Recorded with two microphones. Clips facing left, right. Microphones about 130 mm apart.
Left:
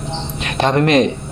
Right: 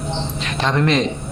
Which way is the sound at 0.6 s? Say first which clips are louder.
Left 5 dB; 55° left (ahead or behind).